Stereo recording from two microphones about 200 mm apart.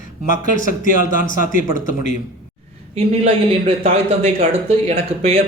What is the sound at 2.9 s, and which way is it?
Speech, 30° right (ahead or behind).